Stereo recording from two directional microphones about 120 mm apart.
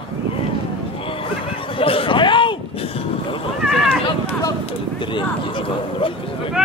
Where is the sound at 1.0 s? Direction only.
50° left (ahead or behind).